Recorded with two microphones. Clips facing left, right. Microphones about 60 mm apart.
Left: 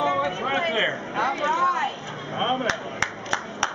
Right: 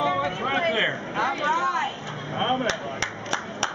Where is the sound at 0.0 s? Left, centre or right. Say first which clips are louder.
Left 1 dB; centre.